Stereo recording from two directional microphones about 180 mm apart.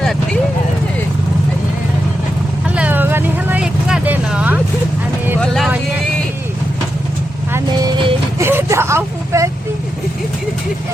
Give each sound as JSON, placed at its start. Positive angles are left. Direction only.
{"t": 2.6, "sound": "vehicle", "side_deg": -5}
{"t": 7.5, "sound": "vehicle", "side_deg": -20}
{"t": 8.4, "sound": "vehicle", "side_deg": -15}